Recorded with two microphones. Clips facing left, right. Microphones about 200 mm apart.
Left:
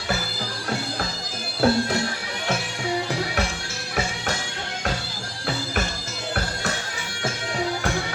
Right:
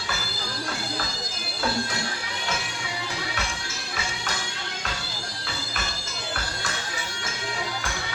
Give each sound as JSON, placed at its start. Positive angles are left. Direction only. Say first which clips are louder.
{"t": 1.6, "sound": "music", "louder": "left 9 dB", "side_deg": 60}